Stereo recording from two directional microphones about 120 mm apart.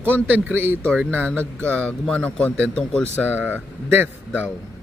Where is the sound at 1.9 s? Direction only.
10° left (ahead or behind).